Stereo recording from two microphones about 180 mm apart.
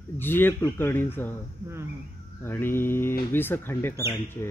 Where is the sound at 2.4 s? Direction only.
10° left (ahead or behind).